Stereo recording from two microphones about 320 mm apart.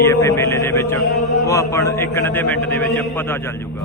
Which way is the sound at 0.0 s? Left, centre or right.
Centre.